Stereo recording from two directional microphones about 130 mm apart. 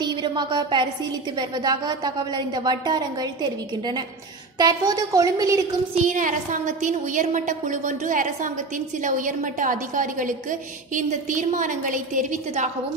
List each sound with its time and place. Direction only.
0.0 s a woman's voice: 35° right (ahead or behind)
6.0 s a woman's voice: 75° right (ahead or behind)